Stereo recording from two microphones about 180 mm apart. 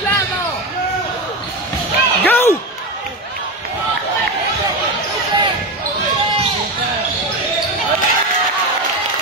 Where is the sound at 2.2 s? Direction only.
15° left (ahead or behind).